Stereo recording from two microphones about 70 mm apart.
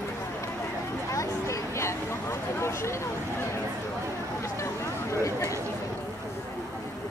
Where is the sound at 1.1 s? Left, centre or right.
Left.